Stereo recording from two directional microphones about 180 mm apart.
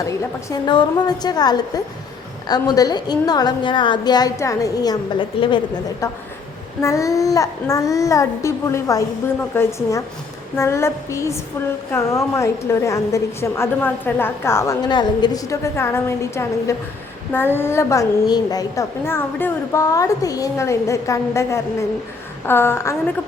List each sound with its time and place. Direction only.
0.5 s a woman's voice: 25° left (ahead or behind)